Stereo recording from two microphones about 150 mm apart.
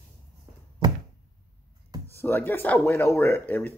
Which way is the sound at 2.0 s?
15° left (ahead or behind).